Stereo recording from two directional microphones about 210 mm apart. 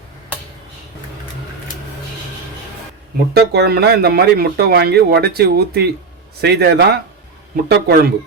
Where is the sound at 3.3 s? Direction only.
50° right (ahead or behind).